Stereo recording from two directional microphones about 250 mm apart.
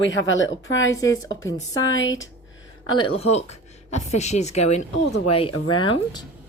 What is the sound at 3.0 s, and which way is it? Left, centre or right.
Speech, left.